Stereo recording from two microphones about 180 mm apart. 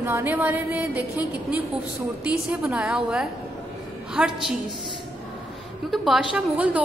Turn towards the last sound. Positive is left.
turn(degrees=-10)  # may be behind; listen again after turning